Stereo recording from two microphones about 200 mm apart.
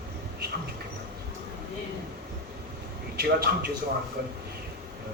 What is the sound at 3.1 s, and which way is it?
Speech, 50° right (ahead or behind).